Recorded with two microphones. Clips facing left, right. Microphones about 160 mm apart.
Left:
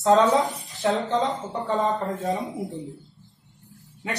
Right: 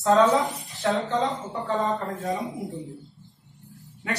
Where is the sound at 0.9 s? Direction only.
Centre (ahead or behind).